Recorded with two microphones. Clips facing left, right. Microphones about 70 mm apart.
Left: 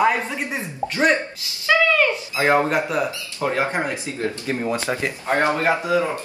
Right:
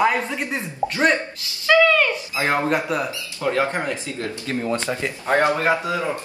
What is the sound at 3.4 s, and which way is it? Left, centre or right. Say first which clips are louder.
Speech: even; left.